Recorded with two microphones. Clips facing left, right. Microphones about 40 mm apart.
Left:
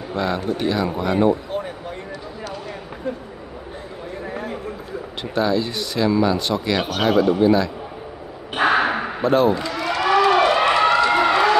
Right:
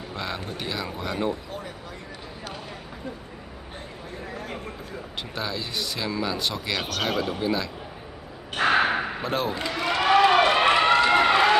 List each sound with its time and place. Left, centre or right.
0.1 s speech: centre
5.3 s a man's voice: centre
8.5 s a sound: centre
9.6 s run: right